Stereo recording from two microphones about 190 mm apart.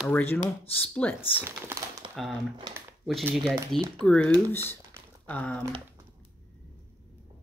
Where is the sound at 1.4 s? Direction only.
10° right (ahead or behind).